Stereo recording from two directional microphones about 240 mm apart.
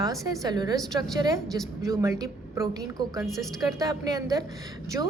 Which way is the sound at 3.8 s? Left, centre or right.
Centre.